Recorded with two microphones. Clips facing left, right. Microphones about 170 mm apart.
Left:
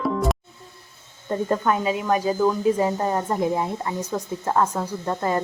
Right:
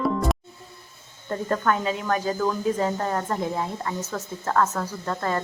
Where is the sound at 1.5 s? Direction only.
15° left (ahead or behind).